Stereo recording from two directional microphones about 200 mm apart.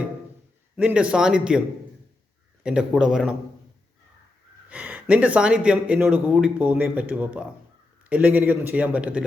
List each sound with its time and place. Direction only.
0.8 s speech: 5° right (ahead or behind)
2.6 s speech: 5° right (ahead or behind)
4.7 s speech: 5° right (ahead or behind)